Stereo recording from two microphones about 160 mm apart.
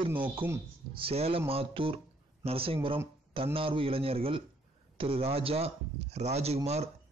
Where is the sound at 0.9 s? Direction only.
35° right (ahead or behind).